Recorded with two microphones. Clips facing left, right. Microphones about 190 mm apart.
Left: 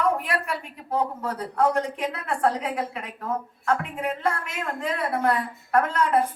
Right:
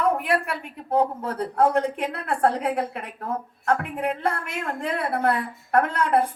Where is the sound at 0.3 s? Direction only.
55° right (ahead or behind).